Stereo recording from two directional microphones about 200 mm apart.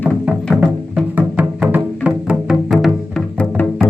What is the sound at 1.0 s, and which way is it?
Music, 5° right (ahead or behind).